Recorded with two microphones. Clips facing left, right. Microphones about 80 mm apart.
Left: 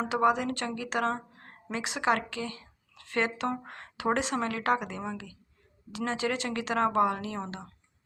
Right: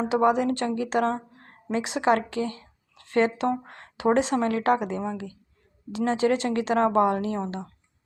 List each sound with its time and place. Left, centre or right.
0.1 s a woman's voice: right